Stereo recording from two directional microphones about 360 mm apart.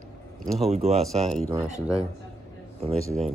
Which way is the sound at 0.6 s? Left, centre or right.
Centre.